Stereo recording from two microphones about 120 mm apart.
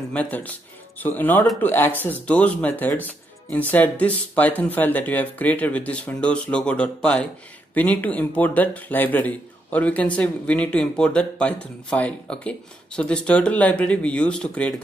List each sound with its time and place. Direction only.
0.1 s speech: 10° left (ahead or behind)